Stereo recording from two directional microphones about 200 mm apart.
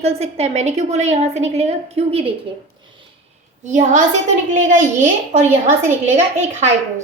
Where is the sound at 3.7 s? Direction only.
35° right (ahead or behind).